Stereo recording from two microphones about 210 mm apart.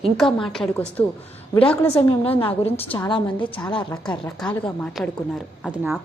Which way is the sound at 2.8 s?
20° left (ahead or behind).